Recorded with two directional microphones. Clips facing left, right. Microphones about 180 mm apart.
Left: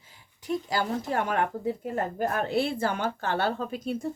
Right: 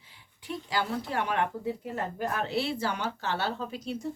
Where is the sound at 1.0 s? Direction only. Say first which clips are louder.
Left 2 dB; 45° left (ahead or behind).